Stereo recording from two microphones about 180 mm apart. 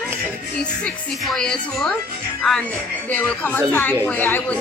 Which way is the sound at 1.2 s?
5° left (ahead or behind).